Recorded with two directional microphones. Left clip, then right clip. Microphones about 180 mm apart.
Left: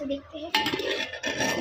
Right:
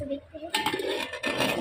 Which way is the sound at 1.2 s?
15° right (ahead or behind).